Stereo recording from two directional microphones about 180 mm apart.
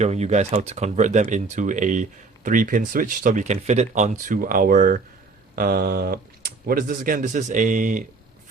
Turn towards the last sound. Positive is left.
turn(degrees=-45)  # may be behind; listen again after turning